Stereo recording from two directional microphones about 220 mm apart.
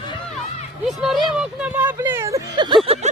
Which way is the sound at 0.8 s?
Centre (ahead or behind).